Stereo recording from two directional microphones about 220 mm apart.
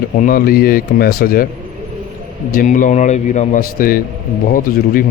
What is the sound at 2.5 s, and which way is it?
Speech, 40° left (ahead or behind).